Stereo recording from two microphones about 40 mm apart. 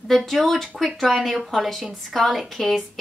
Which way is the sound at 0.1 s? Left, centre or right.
Centre.